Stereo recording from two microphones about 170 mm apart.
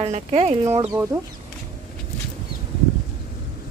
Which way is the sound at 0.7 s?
20° right (ahead or behind).